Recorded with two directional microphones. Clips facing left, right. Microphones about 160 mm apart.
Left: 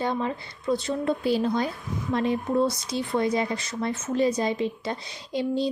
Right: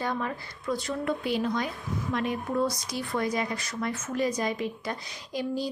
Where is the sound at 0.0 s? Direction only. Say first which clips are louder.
Left 4 dB; 25° left (ahead or behind).